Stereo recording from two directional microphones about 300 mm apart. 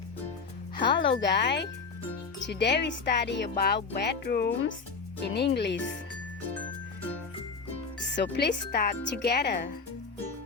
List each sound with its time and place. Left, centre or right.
0.9 s speech: left
8.1 s speech: left